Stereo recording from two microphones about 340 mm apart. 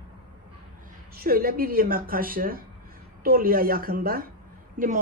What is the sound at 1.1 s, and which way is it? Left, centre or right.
Speech, right.